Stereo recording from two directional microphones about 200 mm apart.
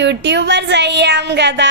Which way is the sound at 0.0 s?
60° right (ahead or behind).